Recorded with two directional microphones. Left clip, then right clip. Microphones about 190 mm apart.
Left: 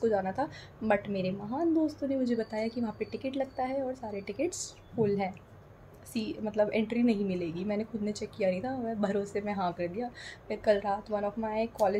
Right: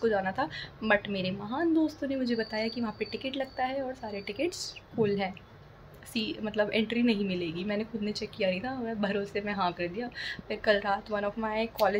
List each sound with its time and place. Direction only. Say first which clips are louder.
0.0 s speech: right 1 dB; 10° left (ahead or behind)